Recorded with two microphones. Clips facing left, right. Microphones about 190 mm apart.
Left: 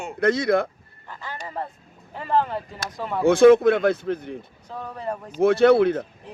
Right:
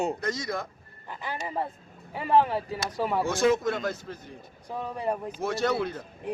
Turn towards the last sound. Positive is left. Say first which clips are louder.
# left 11 dB
turn(degrees=60)  # may be behind; listen again after turning